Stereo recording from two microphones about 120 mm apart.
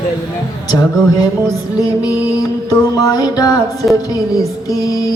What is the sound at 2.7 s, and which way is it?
Speech, 30° left (ahead or behind).